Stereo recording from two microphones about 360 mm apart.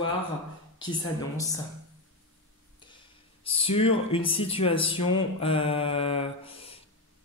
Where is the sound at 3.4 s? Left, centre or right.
Centre.